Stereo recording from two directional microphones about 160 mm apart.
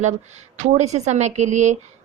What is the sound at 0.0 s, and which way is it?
Speech, 45° right (ahead or behind).